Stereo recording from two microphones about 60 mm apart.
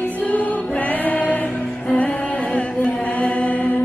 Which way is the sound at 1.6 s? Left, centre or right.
Centre.